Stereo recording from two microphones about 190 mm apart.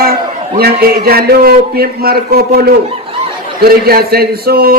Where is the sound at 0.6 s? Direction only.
50° right (ahead or behind).